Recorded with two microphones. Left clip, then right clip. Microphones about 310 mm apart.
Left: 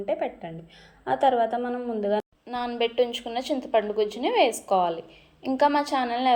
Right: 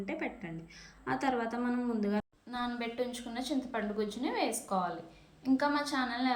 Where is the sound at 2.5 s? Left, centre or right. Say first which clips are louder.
Left 10 dB; left.